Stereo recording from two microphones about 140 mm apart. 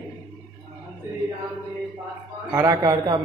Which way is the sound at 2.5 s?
20° right (ahead or behind).